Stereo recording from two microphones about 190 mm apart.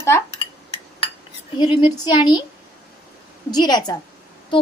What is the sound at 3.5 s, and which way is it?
Speech, 20° left (ahead or behind).